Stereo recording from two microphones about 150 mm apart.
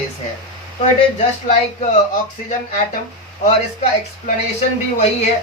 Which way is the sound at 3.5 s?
50° left (ahead or behind).